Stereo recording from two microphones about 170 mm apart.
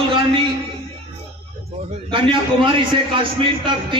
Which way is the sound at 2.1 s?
30° right (ahead or behind).